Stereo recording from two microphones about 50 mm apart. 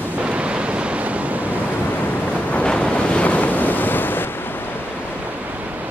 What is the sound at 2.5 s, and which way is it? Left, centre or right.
Waves, left.